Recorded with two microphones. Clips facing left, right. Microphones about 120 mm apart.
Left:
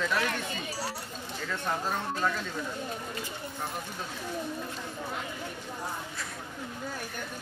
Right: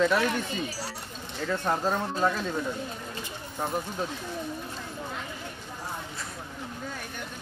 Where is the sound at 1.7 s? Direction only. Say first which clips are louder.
Right 4 dB; 40° right (ahead or behind).